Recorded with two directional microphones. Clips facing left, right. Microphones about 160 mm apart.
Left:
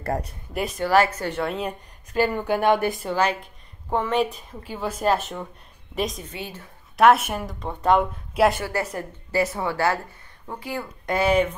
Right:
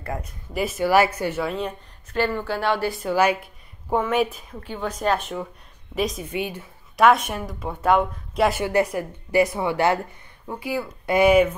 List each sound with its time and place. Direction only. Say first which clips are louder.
0.0 s speech: left 4 dB; 40° left (ahead or behind)
0.5 s speech: right 2 dB; 5° right (ahead or behind)
2.1 s speech: left 2 dB; 15° left (ahead or behind)
3.1 s a woman's voice: right 7 dB; 10° right (ahead or behind)
6.3 s a woman's voice: right 7 dB; 15° right (ahead or behind)
7.0 s speech: left 1 dB; 5° left (ahead or behind)
8.6 s a woman's voice: right 6 dB; 15° right (ahead or behind)